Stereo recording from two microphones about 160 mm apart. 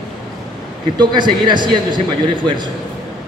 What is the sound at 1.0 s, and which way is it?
A man's voice, 30° right (ahead or behind).